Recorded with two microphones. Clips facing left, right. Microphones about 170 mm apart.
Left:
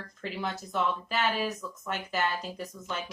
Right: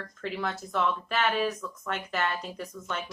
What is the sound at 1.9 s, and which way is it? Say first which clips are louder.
Speech: even; 5° left (ahead or behind).